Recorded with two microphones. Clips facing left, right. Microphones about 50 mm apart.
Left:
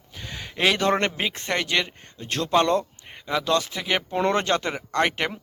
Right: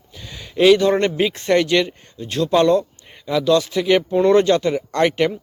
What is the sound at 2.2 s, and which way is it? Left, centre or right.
Speech, left.